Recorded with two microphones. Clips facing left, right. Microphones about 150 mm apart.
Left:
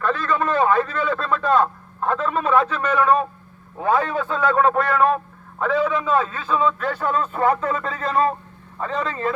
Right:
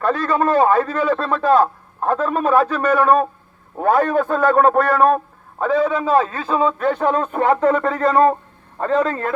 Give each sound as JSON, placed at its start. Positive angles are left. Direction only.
{"t": 0.0, "sound": "a man's voice", "side_deg": -40}